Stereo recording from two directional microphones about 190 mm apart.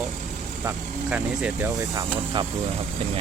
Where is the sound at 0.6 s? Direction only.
10° right (ahead or behind).